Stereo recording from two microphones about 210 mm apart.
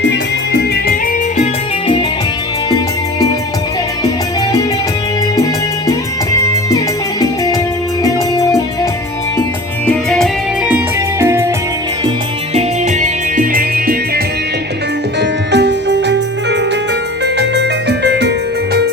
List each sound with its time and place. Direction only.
0.1 s music: 50° left (ahead or behind)
2.6 s music: 20° left (ahead or behind)
6.7 s music: 15° left (ahead or behind)
9.8 s music: 5° left (ahead or behind)
11.2 s music: 15° right (ahead or behind)
12.5 s music: 35° right (ahead or behind)
15.2 s music: 55° right (ahead or behind)